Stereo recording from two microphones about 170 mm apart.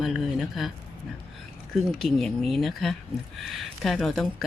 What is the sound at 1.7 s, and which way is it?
Speech, centre (ahead or behind).